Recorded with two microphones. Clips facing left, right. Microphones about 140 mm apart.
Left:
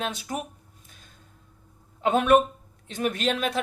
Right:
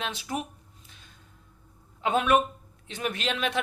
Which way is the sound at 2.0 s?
45° left (ahead or behind).